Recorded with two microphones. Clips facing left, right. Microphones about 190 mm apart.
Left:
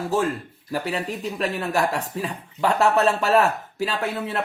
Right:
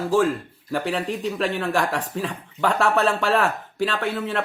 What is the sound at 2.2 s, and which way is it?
Speech, 35° left (ahead or behind).